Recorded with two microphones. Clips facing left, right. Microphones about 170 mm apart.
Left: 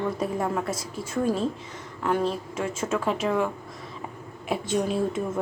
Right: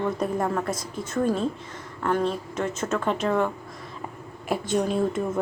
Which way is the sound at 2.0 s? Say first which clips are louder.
Right 1 dB; 5° left (ahead or behind).